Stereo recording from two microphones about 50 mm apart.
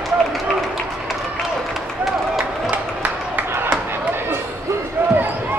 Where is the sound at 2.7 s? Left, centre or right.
Right.